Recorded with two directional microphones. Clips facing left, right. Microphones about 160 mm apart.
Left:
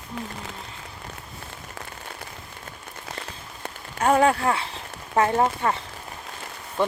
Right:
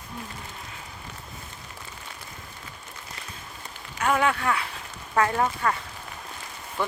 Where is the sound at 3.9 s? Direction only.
35° left (ahead or behind).